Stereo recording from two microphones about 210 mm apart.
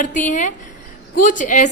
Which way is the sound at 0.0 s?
35° left (ahead or behind).